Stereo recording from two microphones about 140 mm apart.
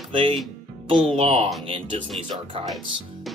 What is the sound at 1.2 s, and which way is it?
Speech, 45° right (ahead or behind).